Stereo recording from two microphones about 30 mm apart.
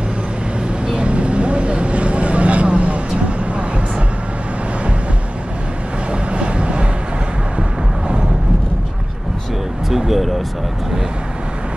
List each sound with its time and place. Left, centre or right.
0.9 s vehicle: right
6.3 s vehicle: right
9.8 s vehicle: centre